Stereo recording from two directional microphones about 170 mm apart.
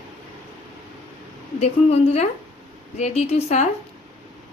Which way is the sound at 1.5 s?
40° left (ahead or behind).